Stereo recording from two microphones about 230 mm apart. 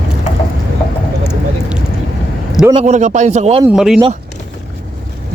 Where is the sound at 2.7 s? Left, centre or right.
Right.